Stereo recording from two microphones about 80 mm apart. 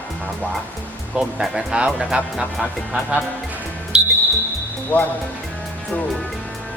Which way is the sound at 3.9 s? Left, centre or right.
Centre.